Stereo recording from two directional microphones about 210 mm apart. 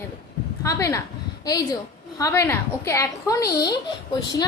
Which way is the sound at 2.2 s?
10° left (ahead or behind).